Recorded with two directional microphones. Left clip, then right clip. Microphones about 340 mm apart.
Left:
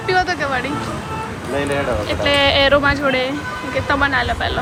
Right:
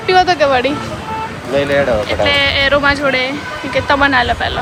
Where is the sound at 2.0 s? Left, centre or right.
Centre.